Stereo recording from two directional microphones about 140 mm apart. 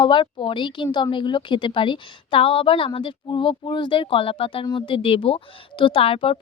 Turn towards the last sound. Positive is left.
turn(degrees=40)  # may be behind; listen again after turning